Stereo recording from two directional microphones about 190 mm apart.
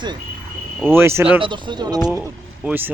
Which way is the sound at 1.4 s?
25° right (ahead or behind).